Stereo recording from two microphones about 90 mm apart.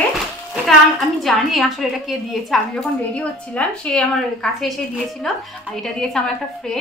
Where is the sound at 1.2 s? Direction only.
Centre (ahead or behind).